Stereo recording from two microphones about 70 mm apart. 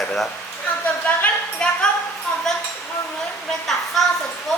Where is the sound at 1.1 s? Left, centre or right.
Left.